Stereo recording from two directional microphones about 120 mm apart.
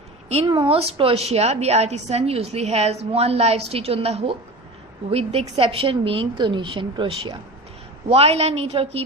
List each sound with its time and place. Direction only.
0.4 s a woman's voice: 40° right (ahead or behind)
8.1 s a woman's voice: 60° right (ahead or behind)